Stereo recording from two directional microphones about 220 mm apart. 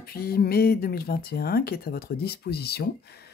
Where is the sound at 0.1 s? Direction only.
45° left (ahead or behind).